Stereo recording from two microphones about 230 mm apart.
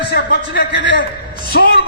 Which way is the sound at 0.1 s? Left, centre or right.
Left.